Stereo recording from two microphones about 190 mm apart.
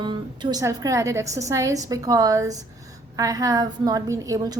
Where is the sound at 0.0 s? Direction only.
25° right (ahead or behind).